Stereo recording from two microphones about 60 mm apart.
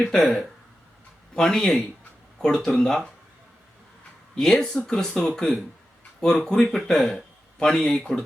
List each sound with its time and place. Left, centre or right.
0.0 s speech: centre
4.4 s speech: centre
5.0 s speech: centre